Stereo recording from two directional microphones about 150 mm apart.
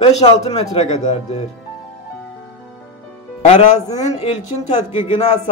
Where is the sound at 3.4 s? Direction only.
50° left (ahead or behind).